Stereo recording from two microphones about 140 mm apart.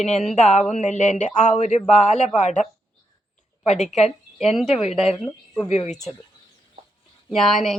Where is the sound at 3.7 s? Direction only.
55° left (ahead or behind).